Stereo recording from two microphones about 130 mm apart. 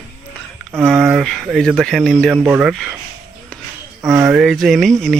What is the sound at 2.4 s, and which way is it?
Speech, 10° right (ahead or behind).